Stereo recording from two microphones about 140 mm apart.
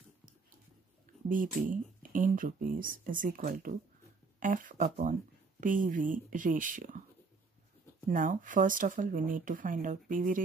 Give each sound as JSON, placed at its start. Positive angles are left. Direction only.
{"t": 1.3, "sound": "speech", "side_deg": -75}
{"t": 8.1, "sound": "speech", "side_deg": -70}